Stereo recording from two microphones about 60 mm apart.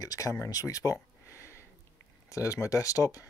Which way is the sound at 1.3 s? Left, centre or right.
Left.